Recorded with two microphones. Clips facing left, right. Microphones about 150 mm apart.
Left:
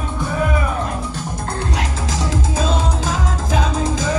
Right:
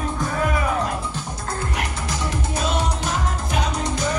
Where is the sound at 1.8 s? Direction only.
90° left.